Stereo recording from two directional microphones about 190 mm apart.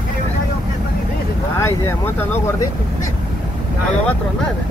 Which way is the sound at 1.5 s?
10° left (ahead or behind).